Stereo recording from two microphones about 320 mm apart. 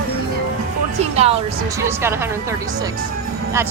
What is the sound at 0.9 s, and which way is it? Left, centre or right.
A woman's voice, centre.